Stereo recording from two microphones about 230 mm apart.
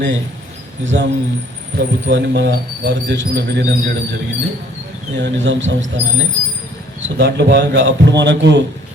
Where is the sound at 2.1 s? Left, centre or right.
Right.